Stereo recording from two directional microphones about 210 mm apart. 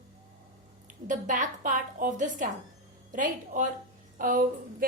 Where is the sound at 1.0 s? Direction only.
40° right (ahead or behind).